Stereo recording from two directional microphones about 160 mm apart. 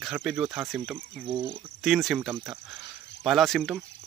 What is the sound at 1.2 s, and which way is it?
Speech, 30° right (ahead or behind).